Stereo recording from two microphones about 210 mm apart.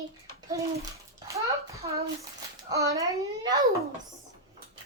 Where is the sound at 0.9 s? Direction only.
15° right (ahead or behind).